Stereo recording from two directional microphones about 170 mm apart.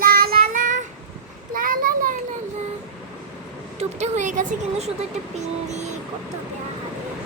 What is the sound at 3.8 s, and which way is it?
Speech, 40° right (ahead or behind).